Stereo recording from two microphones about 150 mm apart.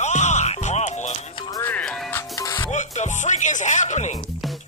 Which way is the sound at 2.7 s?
50° left (ahead or behind).